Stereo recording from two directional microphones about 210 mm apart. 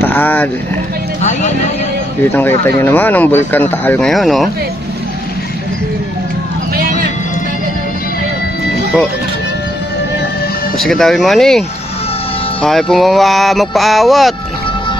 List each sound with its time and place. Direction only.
0.0 s a sound: 10° left (ahead or behind)
1.2 s speech: 35° left (ahead or behind)
2.6 s speech: 10° left (ahead or behind)
3.5 s music: 10° left (ahead or behind)
6.7 s run: 45° right (ahead or behind)
10.8 s music: centre (ahead or behind)
12.6 s music: centre (ahead or behind)